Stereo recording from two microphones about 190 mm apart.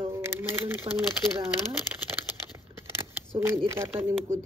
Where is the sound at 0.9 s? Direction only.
25° right (ahead or behind).